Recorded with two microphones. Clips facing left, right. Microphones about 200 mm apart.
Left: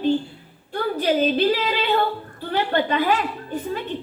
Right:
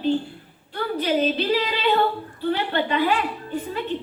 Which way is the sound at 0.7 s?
45° left (ahead or behind).